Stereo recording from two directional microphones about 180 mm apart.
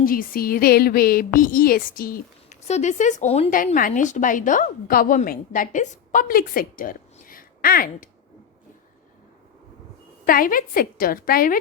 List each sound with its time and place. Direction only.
0.0 s speech: 55° left (ahead or behind)
2.6 s speech: 40° left (ahead or behind)
10.2 s speech: 50° left (ahead or behind)